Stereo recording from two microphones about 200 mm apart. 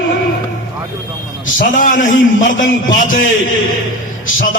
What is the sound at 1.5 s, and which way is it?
A man's voice, 40° left (ahead or behind).